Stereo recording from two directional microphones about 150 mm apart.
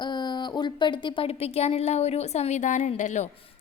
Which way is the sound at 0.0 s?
30° left (ahead or behind).